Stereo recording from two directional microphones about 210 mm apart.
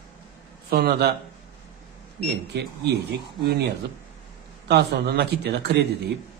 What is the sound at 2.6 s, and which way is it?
Speech, 50° right (ahead or behind).